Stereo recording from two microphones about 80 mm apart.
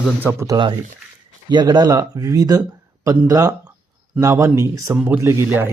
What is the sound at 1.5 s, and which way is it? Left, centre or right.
Speech, right.